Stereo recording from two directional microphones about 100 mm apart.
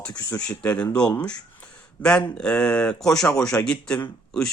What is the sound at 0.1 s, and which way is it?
Speech, 35° left (ahead or behind).